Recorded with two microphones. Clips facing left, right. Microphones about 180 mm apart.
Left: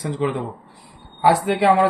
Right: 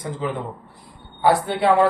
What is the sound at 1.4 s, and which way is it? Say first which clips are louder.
Speech: left 3 dB; 90° left.